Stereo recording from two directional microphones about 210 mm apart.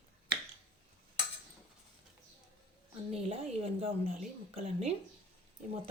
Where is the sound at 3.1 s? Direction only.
30° right (ahead or behind).